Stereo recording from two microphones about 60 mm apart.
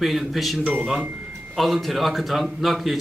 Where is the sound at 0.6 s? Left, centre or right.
Right.